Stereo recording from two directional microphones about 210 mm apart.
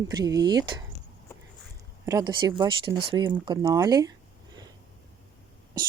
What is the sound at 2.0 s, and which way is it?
Speech, 15° right (ahead or behind).